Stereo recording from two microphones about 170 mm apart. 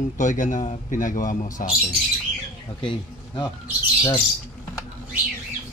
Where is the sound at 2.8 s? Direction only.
30° left (ahead or behind).